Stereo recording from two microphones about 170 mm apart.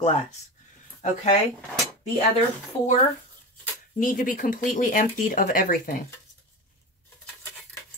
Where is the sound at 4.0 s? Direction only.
50° left (ahead or behind).